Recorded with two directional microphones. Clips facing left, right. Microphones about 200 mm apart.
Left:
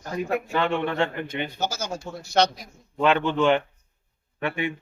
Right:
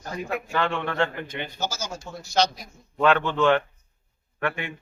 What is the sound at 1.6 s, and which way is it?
Speech, 60° left (ahead or behind).